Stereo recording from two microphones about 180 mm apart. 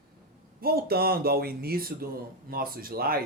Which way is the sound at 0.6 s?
60° right (ahead or behind).